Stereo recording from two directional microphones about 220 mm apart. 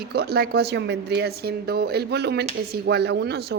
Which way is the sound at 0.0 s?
45° right (ahead or behind).